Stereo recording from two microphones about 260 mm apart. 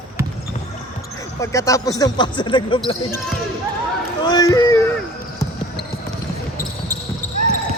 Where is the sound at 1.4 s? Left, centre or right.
Centre.